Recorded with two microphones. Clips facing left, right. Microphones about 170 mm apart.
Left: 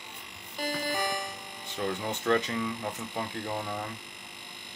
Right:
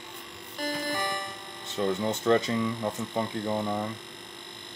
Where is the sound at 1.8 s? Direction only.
25° right (ahead or behind).